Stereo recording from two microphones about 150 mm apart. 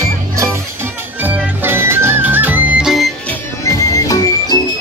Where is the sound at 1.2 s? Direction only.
15° right (ahead or behind).